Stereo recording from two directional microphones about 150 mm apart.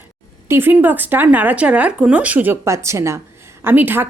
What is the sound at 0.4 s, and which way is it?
Speech, 15° right (ahead or behind).